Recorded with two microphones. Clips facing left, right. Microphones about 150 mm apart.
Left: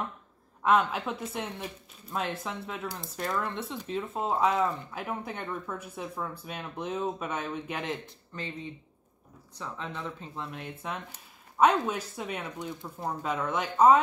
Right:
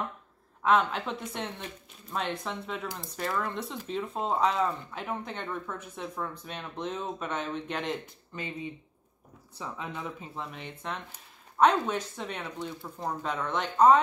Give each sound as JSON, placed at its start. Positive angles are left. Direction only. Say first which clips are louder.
{"t": 0.6, "sound": "speech", "louder": "even", "side_deg": 5}
{"t": 9.6, "sound": "speech", "louder": "even", "side_deg": -10}
{"t": 10.3, "sound": "speech", "louder": "left 1 dB", "side_deg": 0}